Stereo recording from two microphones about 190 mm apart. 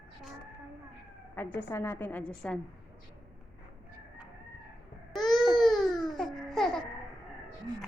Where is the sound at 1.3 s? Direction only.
10° left (ahead or behind).